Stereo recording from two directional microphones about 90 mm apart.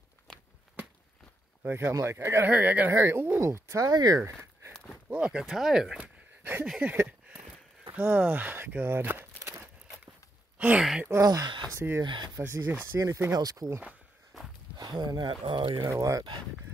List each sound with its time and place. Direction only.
0.3 s walk: 10° left (ahead or behind)
1.6 s speech: 25° right (ahead or behind)
2.5 s speech: 15° right (ahead or behind)
2.9 s speech: 30° right (ahead or behind); by 4.2 s 45° right (ahead or behind)
4.2 s a sound: 25° right (ahead or behind)
5.1 s speech: 10° right (ahead or behind); by 9.6 s 30° right (ahead or behind)
10.6 s speech: 10° right (ahead or behind)
11.1 s speech: 40° right (ahead or behind)
12.0 s speech: 55° right (ahead or behind)
12.4 s speech: 30° right (ahead or behind)
14.8 s speech: 50° right (ahead or behind)
15.9 s speech: 35° right (ahead or behind)